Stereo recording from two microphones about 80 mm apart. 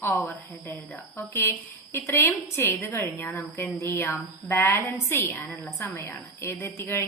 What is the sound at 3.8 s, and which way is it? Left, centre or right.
A woman's voice, left.